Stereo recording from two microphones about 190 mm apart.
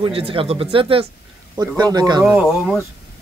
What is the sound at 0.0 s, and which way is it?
Speech, 30° right (ahead or behind).